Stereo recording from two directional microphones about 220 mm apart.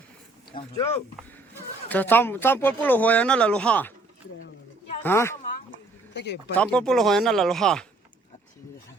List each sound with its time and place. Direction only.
0.5 s speech: 20° left (ahead or behind)
1.9 s speech: 10° left (ahead or behind)
5.0 s speech: 10° left (ahead or behind)
5.7 s a sound: 50° left (ahead or behind)
6.6 s speech: 5° left (ahead or behind)